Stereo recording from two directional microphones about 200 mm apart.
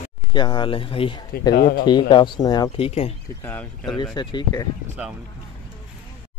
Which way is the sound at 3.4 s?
10° left (ahead or behind).